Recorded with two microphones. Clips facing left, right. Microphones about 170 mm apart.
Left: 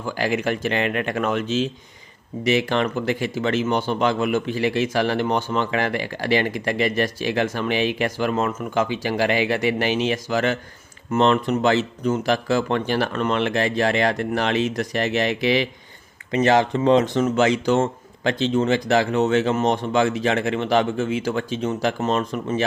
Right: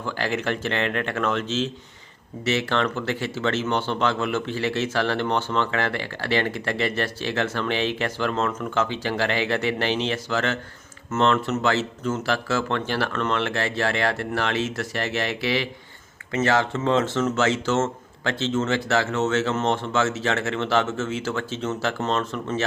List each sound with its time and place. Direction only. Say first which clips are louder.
0.0 s speech: left 3 dB; 10° left (ahead or behind)